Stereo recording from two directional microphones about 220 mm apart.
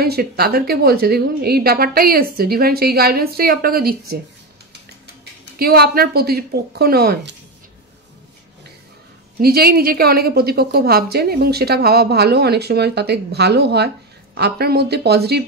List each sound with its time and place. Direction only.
0.0 s a woman's voice: 45° right (ahead or behind)
5.6 s a woman's voice: 45° right (ahead or behind)
9.4 s a woman's voice: 45° right (ahead or behind)